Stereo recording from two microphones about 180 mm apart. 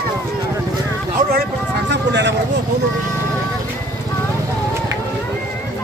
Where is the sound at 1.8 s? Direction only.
75° right (ahead or behind).